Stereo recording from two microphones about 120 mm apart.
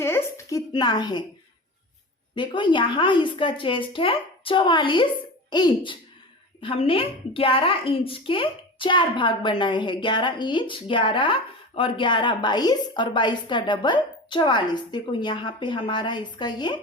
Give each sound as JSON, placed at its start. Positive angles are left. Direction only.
{"t": 0.0, "sound": "a sound", "side_deg": 20}
{"t": 0.7, "sound": "a woman's voice", "side_deg": 35}
{"t": 2.3, "sound": "a woman's voice", "side_deg": 40}